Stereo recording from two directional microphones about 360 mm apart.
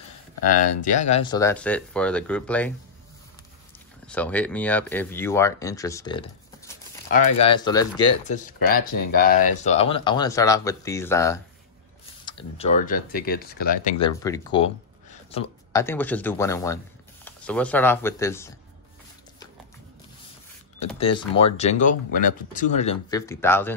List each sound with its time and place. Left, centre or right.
0.4 s speech: left; by 2.7 s centre
4.1 s speech: centre
7.1 s speech: left
8.4 s speech: left; by 18.5 s centre
20.9 s speech: centre